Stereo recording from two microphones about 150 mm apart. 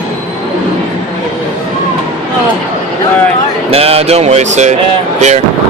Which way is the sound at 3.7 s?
40° right (ahead or behind).